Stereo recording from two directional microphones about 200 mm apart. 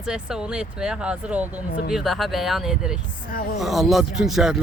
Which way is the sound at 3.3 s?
45° left (ahead or behind).